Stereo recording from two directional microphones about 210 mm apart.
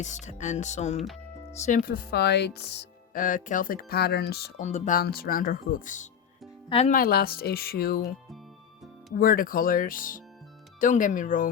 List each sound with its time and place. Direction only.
0.0 s speech: 35° left (ahead or behind)
0.9 s speech: centre (ahead or behind)
1.5 s speech: 35° left (ahead or behind)
4.6 s speech: 35° left (ahead or behind)
6.9 s speech: 45° left (ahead or behind)
9.1 s speech: 45° left (ahead or behind)